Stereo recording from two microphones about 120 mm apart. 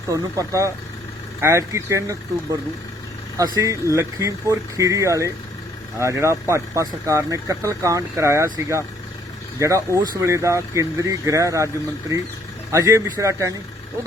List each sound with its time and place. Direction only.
0.1 s speech: 30° right (ahead or behind)
3.3 s speech: 30° right (ahead or behind)
9.6 s speech: 25° right (ahead or behind)